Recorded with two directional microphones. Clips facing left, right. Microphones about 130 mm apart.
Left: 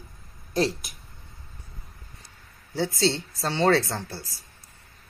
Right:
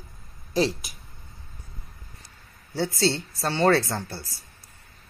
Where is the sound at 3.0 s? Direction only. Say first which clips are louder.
Even; 25° left (ahead or behind).